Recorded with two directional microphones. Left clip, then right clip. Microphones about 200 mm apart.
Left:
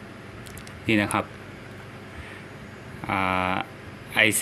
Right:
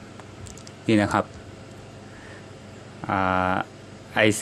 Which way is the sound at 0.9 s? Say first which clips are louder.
Right 1 dB; 15° right (ahead or behind).